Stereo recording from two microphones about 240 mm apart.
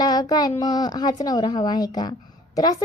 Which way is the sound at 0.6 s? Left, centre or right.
Centre.